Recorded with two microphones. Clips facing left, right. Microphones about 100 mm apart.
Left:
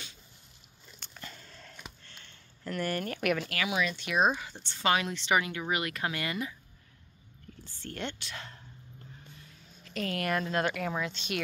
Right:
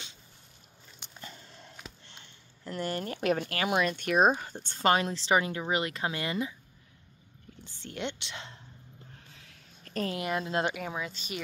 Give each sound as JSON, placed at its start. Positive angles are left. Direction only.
{"t": 0.9, "sound": "a sound", "side_deg": -20}
{"t": 3.7, "sound": "speech", "side_deg": -50}
{"t": 7.6, "sound": "speech", "side_deg": -15}
{"t": 9.3, "sound": "a sound", "side_deg": -90}
{"t": 10.1, "sound": "speech", "side_deg": -20}
{"t": 10.8, "sound": "speech", "side_deg": -5}